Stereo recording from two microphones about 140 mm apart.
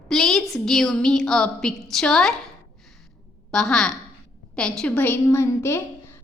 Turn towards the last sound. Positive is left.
turn(degrees=20)  # may be behind; listen again after turning